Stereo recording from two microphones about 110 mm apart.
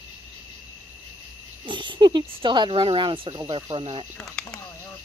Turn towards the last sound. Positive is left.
turn(degrees=10)  # may be behind; listen again after turning